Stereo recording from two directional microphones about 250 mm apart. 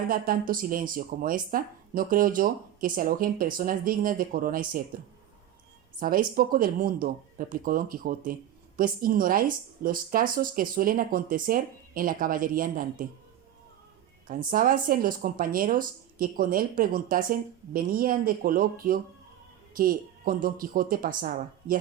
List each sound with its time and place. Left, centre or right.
0.1 s speech: right
6.0 s speech: right
14.3 s speech: right